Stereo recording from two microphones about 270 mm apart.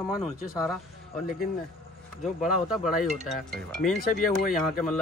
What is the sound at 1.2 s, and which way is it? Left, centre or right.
Speech, left.